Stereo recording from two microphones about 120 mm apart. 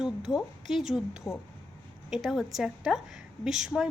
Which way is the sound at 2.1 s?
Centre (ahead or behind).